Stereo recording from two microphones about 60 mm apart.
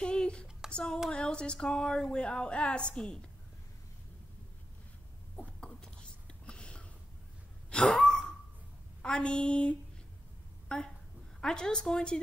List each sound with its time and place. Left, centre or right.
0.0 s a woman's voice: centre
5.6 s whispering: centre
6.4 s a sound: centre
7.9 s gasp: centre
9.0 s a woman's voice: centre